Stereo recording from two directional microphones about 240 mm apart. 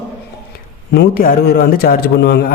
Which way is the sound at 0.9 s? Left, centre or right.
Left.